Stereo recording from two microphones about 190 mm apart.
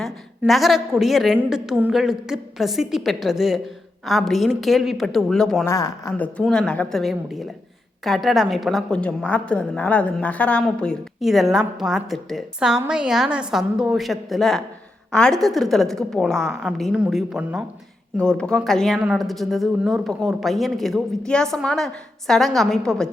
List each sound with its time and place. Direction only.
0.0 s a woman's voice: centre (ahead or behind)
5.6 s speech: 20° left (ahead or behind)
6.1 s a woman's voice: 5° left (ahead or behind)